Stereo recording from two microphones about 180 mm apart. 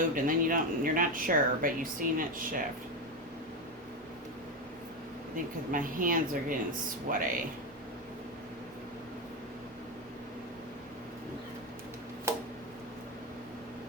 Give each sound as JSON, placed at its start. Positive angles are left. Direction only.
{"t": 0.1, "sound": "speech", "side_deg": -50}
{"t": 5.7, "sound": "speech", "side_deg": -50}
{"t": 12.3, "sound": "tick-tock", "side_deg": -15}